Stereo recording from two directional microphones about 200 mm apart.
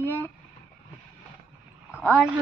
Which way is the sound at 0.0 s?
10° left (ahead or behind).